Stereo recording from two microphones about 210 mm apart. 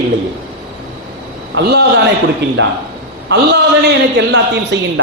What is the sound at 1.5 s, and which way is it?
A man's voice, 50° right (ahead or behind).